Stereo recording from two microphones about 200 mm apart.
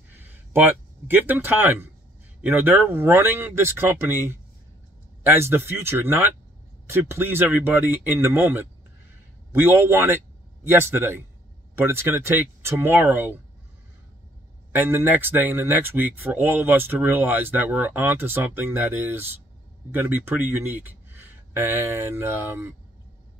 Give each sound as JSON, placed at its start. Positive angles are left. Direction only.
{"t": 0.2, "sound": "speech", "side_deg": -10}
{"t": 14.7, "sound": "speech", "side_deg": -10}